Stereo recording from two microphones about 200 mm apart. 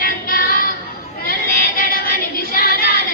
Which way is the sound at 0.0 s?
45° left (ahead or behind).